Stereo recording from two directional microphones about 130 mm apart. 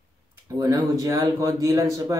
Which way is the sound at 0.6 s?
25° right (ahead or behind).